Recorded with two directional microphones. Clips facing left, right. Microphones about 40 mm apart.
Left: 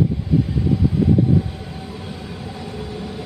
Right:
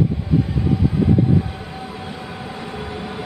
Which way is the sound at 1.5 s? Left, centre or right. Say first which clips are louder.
Right 2 dB; right.